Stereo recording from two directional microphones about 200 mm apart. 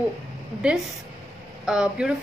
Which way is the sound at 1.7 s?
5° right (ahead or behind).